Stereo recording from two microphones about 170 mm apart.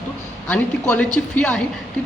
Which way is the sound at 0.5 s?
10° left (ahead or behind).